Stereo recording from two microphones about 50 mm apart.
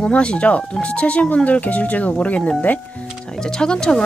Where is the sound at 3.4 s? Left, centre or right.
Centre.